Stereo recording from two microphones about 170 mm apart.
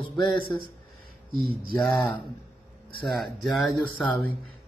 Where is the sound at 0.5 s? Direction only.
15° left (ahead or behind).